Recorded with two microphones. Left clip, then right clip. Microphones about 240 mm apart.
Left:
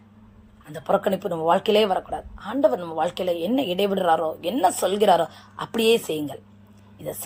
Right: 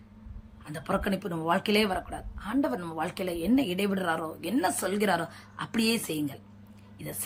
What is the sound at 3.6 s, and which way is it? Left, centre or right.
Speech, centre.